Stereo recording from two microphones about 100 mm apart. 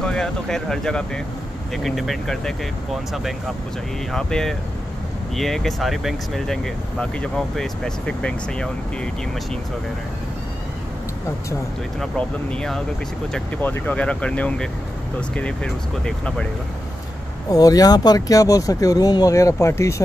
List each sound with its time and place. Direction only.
0.0 s speech: 5° left (ahead or behind)
12.0 s speech: 10° left (ahead or behind)
13.6 s speech: 20° left (ahead or behind)
17.5 s speech: 40° left (ahead or behind)